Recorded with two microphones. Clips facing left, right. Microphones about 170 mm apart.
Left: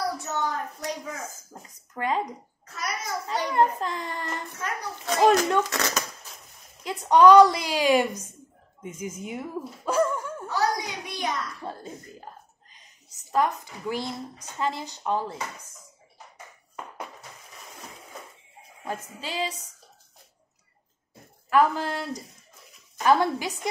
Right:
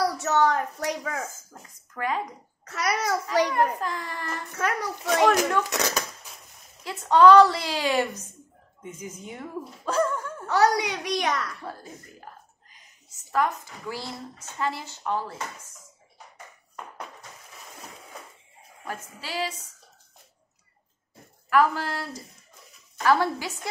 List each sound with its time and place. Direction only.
0.0 s a sound: 80° right
1.5 s speech: 25° left (ahead or behind)
2.6 s a child's voice: 85° right
3.5 s a woman's voice: 25° left (ahead or behind)
5.7 s speech: 15° right (ahead or behind)
6.8 s a woman's voice: 15° left (ahead or behind)
10.4 s a child's voice: 75° right (ahead or behind)
11.6 s a woman's voice: 25° left (ahead or behind)
18.9 s a woman's voice: 20° left (ahead or behind)
21.5 s a woman's voice: 20° left (ahead or behind)